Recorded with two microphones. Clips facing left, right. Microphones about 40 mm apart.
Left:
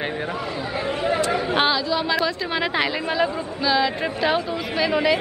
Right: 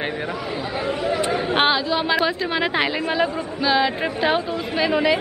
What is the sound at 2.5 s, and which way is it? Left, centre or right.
Speech, centre.